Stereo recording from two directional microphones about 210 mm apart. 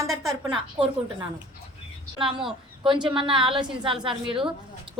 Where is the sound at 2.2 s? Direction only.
25° right (ahead or behind).